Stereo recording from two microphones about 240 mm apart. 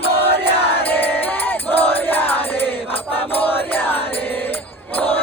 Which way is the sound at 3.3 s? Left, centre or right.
Centre.